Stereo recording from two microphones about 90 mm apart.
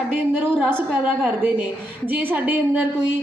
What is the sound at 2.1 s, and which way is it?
Speech, 20° right (ahead or behind).